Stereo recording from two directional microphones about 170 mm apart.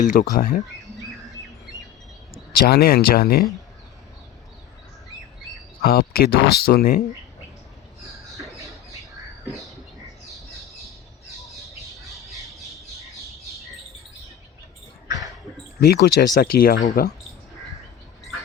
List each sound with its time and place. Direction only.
0.0 s speech: 55° left (ahead or behind)
2.5 s speech: 65° left (ahead or behind)
5.8 s speech: 65° left (ahead or behind)
8.1 s a sound: 20° right (ahead or behind)
10.2 s bird: centre (ahead or behind)
12.1 s squawk: centre (ahead or behind)
15.8 s speech: 70° left (ahead or behind)